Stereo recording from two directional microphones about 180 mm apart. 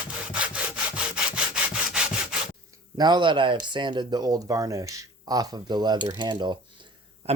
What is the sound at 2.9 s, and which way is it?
Speech, 25° right (ahead or behind).